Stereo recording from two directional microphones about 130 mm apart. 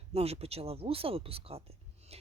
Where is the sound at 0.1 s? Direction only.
50° right (ahead or behind).